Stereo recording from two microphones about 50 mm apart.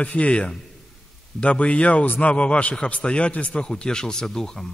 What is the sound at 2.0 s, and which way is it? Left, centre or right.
Speech, left.